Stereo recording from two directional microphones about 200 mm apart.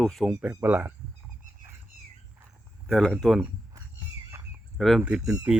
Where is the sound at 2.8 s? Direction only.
Centre (ahead or behind).